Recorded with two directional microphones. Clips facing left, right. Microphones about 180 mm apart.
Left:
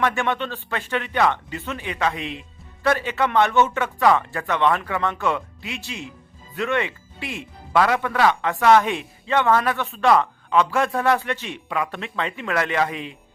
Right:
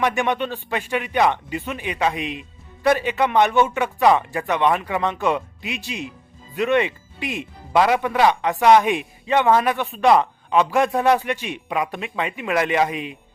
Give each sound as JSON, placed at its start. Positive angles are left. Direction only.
{"t": 0.0, "sound": "speech", "side_deg": -15}